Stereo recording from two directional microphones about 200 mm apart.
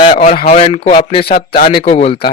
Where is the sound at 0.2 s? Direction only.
35° left (ahead or behind).